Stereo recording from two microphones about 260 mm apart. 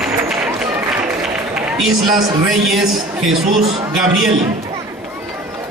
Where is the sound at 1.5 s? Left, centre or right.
Centre.